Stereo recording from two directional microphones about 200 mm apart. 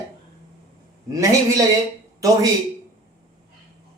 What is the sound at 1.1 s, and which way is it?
Speech, 15° right (ahead or behind).